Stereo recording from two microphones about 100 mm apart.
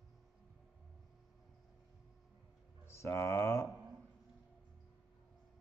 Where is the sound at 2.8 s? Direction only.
25° left (ahead or behind).